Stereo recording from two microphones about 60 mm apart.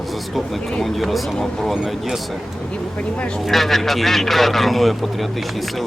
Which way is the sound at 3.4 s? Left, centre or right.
Centre.